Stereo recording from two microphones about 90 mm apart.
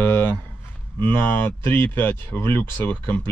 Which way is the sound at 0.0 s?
25° left (ahead or behind).